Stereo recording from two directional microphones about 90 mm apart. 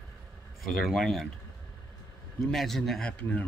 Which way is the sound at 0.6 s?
Centre (ahead or behind).